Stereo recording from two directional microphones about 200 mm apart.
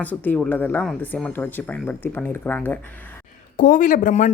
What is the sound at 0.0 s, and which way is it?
Speech, 10° left (ahead or behind).